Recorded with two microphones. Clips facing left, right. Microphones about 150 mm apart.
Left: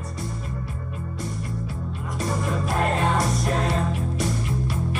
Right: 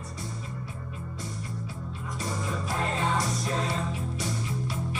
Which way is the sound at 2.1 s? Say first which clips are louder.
Left 7 dB; 65° left (ahead or behind).